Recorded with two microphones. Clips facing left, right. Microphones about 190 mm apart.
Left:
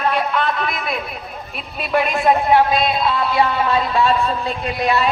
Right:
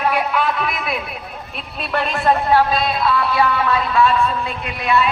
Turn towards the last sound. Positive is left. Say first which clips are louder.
# left 1 dB
turn(degrees=35)  # may be behind; listen again after turning